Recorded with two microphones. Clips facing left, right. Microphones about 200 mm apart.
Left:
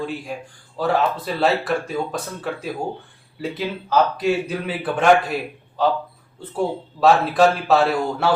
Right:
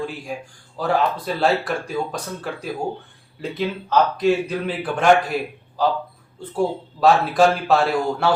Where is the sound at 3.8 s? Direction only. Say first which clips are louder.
Right 1 dB; 5° left (ahead or behind).